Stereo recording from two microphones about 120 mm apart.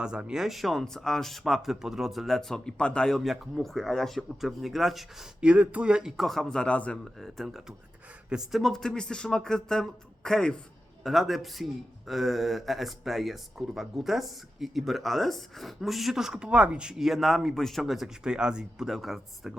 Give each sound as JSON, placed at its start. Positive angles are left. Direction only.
{"t": 0.0, "sound": "a man's voice", "side_deg": -5}